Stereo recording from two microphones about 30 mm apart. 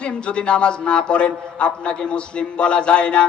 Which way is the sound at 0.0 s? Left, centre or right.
Left.